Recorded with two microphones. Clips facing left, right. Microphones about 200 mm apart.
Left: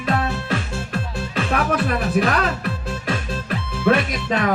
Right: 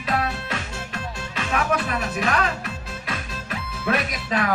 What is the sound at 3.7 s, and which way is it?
Music, 30° left (ahead or behind).